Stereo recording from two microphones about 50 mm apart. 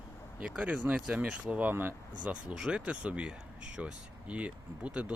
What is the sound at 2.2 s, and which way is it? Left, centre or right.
Speech, right.